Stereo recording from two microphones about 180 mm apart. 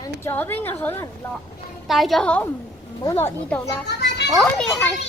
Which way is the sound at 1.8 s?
Centre (ahead or behind).